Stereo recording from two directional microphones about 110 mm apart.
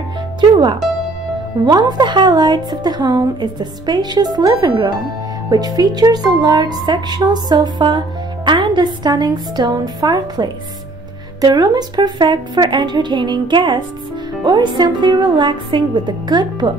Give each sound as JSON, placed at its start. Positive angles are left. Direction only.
{"t": 1.6, "sound": "a woman's voice", "side_deg": -40}